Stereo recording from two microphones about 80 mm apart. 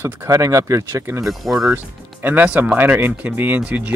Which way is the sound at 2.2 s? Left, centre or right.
Right.